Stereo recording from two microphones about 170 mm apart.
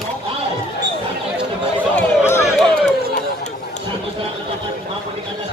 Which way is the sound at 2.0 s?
15° left (ahead or behind).